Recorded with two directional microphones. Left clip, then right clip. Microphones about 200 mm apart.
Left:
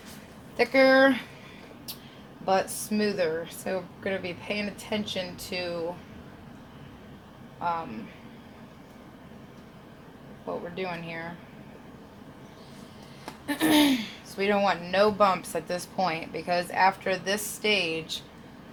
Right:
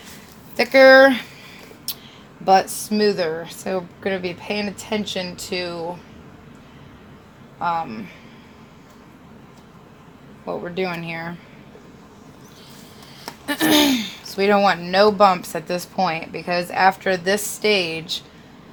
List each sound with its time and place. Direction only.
0.5 s speech: 60° right (ahead or behind)
1.9 s a sound: 60° right (ahead or behind)
2.5 s speech: 50° right (ahead or behind)
7.6 s speech: 55° right (ahead or behind)
10.8 s speech: 60° right (ahead or behind)
13.5 s speech: 55° right (ahead or behind)